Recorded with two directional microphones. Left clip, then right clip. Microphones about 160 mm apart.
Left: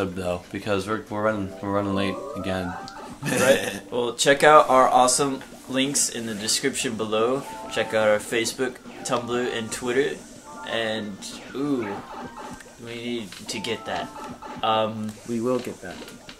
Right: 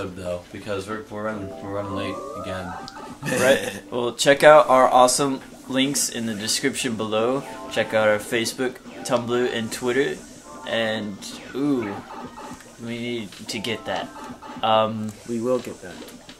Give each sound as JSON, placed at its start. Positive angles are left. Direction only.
{"t": 0.0, "sound": "speech", "side_deg": -45}
{"t": 3.3, "sound": "speech", "side_deg": 0}
{"t": 3.9, "sound": "a man's voice", "side_deg": 35}
{"t": 12.8, "sound": "speech", "side_deg": 40}